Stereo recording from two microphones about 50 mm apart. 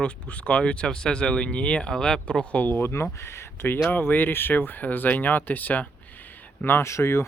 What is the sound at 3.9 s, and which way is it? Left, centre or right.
Speech, left.